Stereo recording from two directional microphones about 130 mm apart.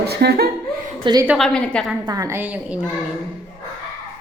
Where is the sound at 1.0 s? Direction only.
35° right (ahead or behind).